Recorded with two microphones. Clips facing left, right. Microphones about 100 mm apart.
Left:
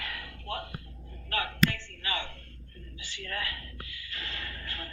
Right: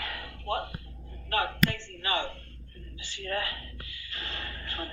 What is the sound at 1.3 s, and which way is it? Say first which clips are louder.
Speech: right 1 dB; 30° right (ahead or behind).